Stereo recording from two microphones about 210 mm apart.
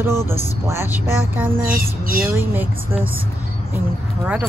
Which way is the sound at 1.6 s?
45° right (ahead or behind).